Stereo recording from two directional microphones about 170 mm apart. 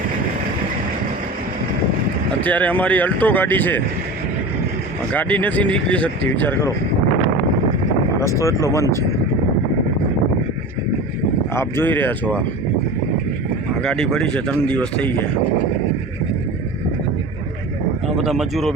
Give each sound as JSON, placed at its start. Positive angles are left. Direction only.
{"t": 2.4, "sound": "speech", "side_deg": 10}
{"t": 5.1, "sound": "speech", "side_deg": 10}
{"t": 8.4, "sound": "speech", "side_deg": 15}
{"t": 11.5, "sound": "speech", "side_deg": 15}
{"t": 13.8, "sound": "speech", "side_deg": 5}
{"t": 18.2, "sound": "speech", "side_deg": 0}